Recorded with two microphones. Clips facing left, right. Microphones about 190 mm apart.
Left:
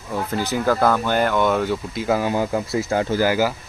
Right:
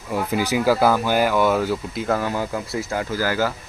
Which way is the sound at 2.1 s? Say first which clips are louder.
Left 3 dB; 20° left (ahead or behind).